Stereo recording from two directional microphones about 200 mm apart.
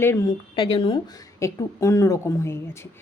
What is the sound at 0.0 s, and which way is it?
Speech, 15° left (ahead or behind).